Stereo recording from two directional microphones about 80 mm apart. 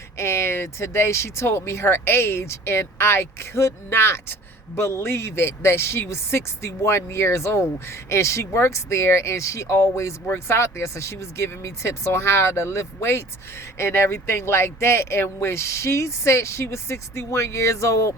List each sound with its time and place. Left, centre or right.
0.2 s speech: left